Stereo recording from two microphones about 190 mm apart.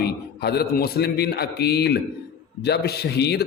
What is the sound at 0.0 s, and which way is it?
A man's voice, 55° left (ahead or behind).